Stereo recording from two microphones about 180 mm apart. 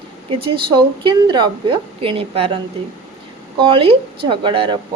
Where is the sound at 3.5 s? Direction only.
30° right (ahead or behind).